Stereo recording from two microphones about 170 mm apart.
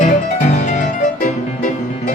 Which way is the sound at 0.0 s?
45° left (ahead or behind).